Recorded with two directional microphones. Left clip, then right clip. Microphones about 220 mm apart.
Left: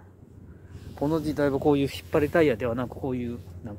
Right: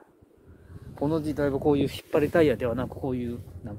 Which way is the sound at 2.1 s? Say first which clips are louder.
Even; centre (ahead or behind).